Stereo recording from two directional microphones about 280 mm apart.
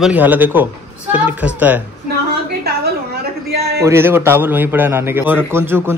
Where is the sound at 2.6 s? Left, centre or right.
Right.